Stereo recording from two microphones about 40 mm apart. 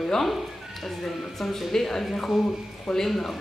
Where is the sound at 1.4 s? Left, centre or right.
Centre.